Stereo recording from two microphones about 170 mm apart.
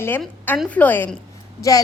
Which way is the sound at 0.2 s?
10° left (ahead or behind).